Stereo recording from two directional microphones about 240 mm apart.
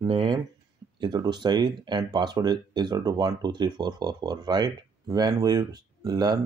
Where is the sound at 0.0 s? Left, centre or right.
Right.